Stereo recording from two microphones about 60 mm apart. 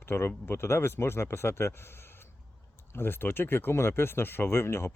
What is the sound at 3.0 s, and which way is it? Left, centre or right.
Speech, left.